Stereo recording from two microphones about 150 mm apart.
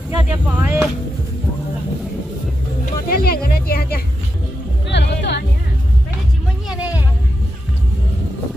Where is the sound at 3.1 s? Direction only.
85° left.